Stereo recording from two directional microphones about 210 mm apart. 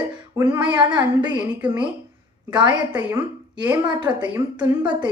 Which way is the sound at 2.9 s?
10° right (ahead or behind).